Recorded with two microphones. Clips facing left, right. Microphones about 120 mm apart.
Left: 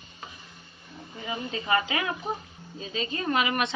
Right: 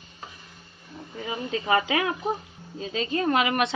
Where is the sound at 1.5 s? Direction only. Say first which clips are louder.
Right 4 dB; 90° right.